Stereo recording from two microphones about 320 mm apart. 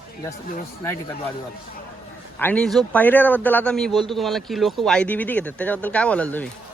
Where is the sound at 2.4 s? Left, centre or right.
Centre.